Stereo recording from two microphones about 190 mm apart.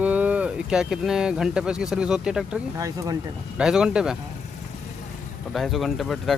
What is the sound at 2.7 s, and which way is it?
Speech, 20° right (ahead or behind).